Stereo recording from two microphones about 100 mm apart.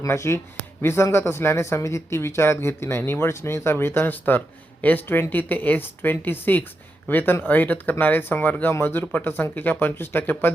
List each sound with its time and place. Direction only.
0.0 s speech: 30° left (ahead or behind)